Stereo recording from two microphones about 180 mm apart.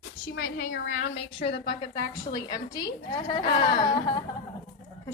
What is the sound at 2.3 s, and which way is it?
A woman's voice, 20° left (ahead or behind).